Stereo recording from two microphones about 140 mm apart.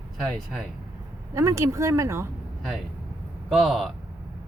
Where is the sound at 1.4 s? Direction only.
20° right (ahead or behind).